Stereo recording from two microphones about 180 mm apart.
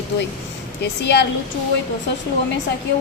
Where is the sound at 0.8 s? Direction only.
70° left (ahead or behind).